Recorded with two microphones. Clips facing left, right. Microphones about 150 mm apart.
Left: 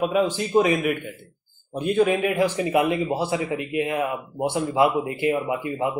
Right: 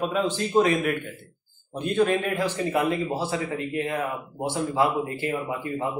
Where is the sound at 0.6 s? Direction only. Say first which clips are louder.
Left 2 dB; 10° left (ahead or behind).